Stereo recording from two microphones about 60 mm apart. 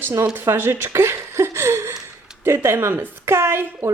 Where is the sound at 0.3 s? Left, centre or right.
Right.